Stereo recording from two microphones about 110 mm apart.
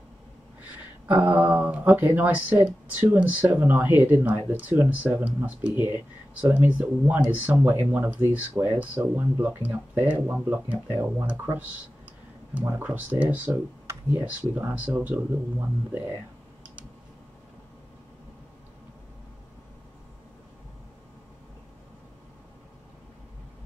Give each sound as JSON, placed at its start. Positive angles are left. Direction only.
{"t": 1.1, "sound": "speech", "side_deg": -15}
{"t": 12.6, "sound": "speech", "side_deg": -20}